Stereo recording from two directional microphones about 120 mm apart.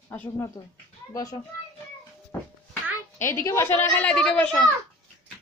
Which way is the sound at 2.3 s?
25° left (ahead or behind).